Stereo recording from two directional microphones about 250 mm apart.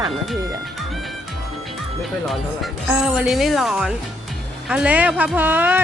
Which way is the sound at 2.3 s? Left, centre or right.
Centre.